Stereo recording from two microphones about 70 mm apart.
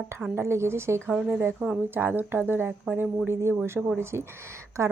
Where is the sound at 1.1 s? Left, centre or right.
Right.